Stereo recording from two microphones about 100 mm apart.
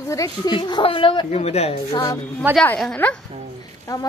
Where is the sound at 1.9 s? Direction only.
45° left (ahead or behind).